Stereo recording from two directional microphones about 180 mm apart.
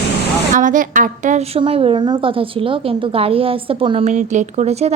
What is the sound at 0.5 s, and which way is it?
Speech, 45° right (ahead or behind).